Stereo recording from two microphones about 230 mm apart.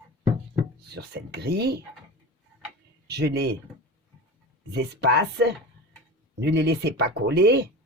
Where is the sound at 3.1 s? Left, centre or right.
Right.